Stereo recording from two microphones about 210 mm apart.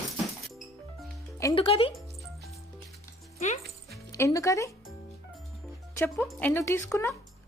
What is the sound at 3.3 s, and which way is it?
Speech, 30° left (ahead or behind).